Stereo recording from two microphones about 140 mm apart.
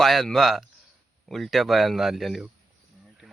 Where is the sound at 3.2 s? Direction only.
10° right (ahead or behind).